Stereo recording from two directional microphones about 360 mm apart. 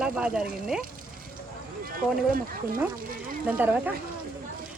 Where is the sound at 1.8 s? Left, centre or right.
Right.